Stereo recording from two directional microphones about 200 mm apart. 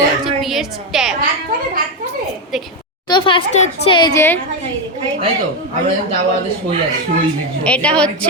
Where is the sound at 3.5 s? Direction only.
35° left (ahead or behind).